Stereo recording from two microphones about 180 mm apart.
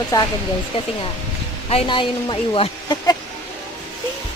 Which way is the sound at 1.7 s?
30° left (ahead or behind).